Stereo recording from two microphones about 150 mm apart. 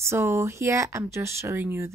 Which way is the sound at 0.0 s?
20° right (ahead or behind).